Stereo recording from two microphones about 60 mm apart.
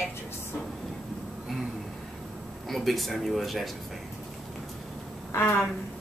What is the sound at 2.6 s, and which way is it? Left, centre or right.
Speech, centre.